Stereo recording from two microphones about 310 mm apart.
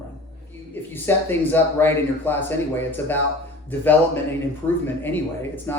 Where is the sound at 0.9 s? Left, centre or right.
Centre.